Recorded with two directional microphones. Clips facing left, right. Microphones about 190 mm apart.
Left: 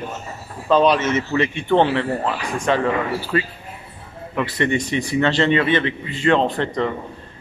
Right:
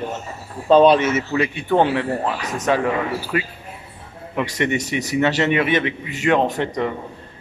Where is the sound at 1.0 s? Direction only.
5° right (ahead or behind).